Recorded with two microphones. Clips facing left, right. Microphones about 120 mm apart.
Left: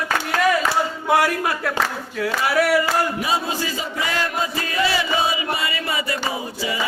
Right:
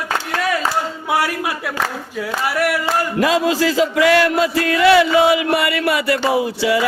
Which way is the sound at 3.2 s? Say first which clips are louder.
Right 8 dB; 90° right.